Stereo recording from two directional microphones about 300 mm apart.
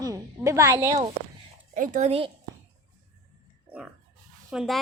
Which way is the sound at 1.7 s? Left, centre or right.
Right.